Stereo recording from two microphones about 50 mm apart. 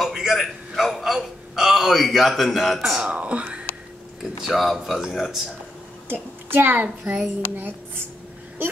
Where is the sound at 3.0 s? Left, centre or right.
Right.